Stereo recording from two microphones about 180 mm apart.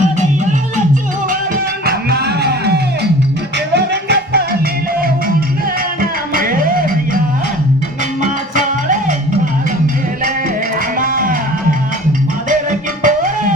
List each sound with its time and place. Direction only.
1.9 s music: 60° right (ahead or behind)
6.0 s music: 50° right (ahead or behind)
8.2 s music: 45° right (ahead or behind)
11.0 s music: 50° right (ahead or behind)
13.0 s music: 45° right (ahead or behind)